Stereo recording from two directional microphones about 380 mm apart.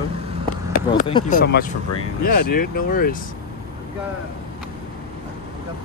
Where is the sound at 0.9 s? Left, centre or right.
Centre.